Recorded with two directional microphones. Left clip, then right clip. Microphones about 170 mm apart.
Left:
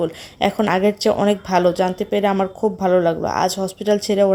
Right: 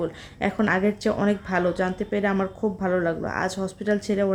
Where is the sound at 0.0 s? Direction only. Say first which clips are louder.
Left 7 dB; 25° left (ahead or behind).